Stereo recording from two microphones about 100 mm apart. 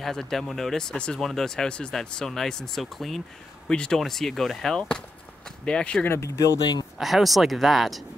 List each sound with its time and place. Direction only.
0.0 s speech: 5° left (ahead or behind)
6.0 s speech: 30° left (ahead or behind)
7.0 s speech: centre (ahead or behind)